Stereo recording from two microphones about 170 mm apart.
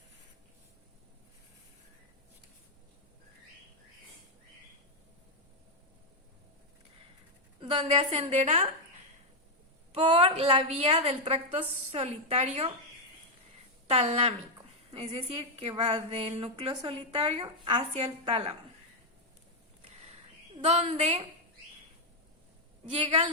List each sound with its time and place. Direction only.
7.6 s a woman's voice: 30° right (ahead or behind)
9.9 s a woman's voice: 35° right (ahead or behind)
13.8 s a woman's voice: 35° right (ahead or behind)
19.8 s a sound: 35° right (ahead or behind)
20.6 s a woman's voice: 40° right (ahead or behind)
22.9 s a woman's voice: 35° right (ahead or behind)